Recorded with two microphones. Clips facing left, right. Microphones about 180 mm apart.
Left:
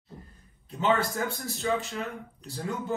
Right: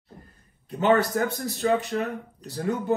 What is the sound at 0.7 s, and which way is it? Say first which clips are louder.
Speech: right 5 dB; 65° right (ahead or behind).